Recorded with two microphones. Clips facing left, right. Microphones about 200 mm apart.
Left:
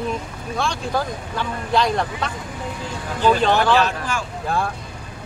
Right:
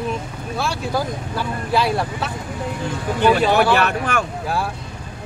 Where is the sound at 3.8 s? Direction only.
65° right (ahead or behind).